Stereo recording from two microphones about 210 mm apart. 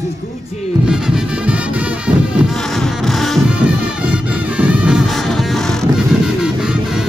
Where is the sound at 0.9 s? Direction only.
5° right (ahead or behind).